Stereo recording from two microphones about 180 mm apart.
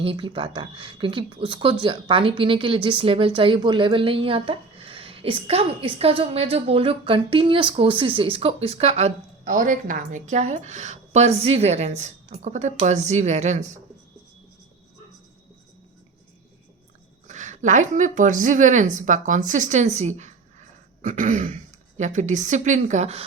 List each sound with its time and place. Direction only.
0.0 s a woman's voice: 30° right (ahead or behind)
17.2 s speech: 40° right (ahead or behind)